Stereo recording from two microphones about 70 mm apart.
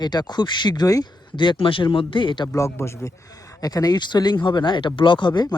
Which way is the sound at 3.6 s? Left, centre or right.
Left.